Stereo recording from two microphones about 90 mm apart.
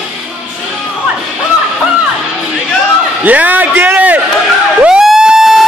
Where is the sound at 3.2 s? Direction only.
20° right (ahead or behind).